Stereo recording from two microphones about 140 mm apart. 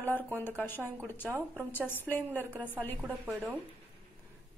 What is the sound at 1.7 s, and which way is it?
Speech, 15° left (ahead or behind).